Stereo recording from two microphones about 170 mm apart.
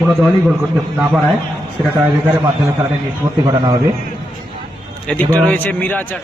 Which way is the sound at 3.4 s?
25° right (ahead or behind).